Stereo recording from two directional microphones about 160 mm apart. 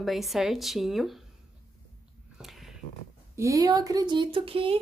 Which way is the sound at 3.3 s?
20° right (ahead or behind).